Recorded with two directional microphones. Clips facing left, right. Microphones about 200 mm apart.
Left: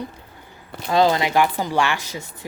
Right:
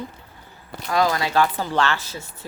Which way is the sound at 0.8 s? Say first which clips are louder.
Left 4 dB; 25° left (ahead or behind).